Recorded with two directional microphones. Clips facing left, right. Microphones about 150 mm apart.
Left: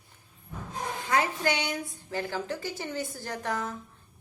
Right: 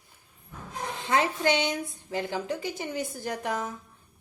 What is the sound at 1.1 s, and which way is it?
A woman's voice, 25° right (ahead or behind).